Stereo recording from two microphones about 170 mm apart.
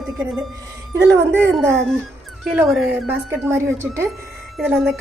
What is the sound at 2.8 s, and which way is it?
Speech, 15° right (ahead or behind).